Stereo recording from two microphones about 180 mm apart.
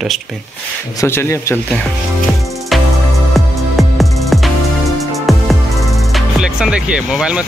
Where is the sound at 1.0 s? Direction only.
15° left (ahead or behind).